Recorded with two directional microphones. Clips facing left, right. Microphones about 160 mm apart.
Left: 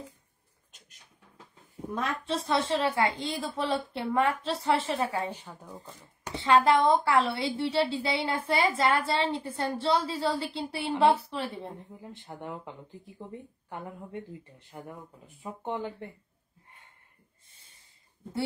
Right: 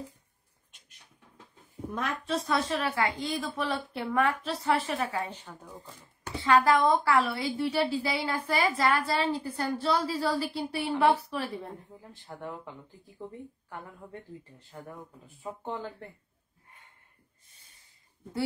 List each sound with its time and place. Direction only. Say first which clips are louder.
0.7 s a sound: left 5 dB; 40° left (ahead or behind)
2.0 s a woman's voice: even; 30° left (ahead or behind)
5.3 s speech: left 2 dB; 10° left (ahead or behind)
6.2 s a woman's voice: left 1 dB; 20° left (ahead or behind)
14.6 s a woman's voice: left 1 dB; 20° left (ahead or behind)
17.5 s snort: right 1 dB; 25° left (ahead or behind)